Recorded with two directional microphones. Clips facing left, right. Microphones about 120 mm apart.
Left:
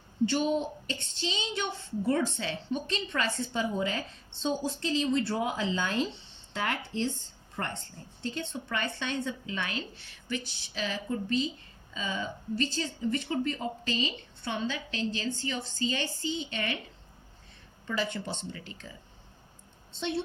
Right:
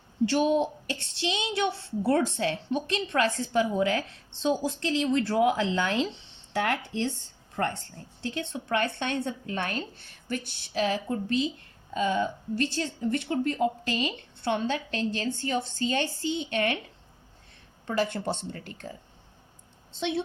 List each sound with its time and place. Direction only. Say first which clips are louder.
0.3 s a woman's voice: right 5 dB; 65° right (ahead or behind)
8.2 s a woman's voice: right 2 dB; 70° right (ahead or behind)
17.8 s a woman's voice: right 5 dB; 55° right (ahead or behind)